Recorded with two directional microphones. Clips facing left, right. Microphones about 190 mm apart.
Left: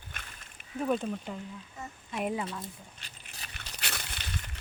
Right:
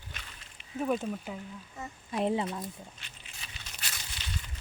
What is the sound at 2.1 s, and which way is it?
Speech, 25° right (ahead or behind).